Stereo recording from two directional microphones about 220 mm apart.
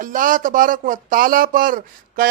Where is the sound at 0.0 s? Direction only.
35° right (ahead or behind).